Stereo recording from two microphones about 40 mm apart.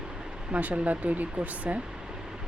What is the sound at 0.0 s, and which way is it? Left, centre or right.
Vehicle, centre.